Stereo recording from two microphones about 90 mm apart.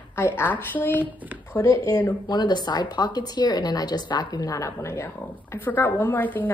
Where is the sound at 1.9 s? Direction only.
45° left (ahead or behind).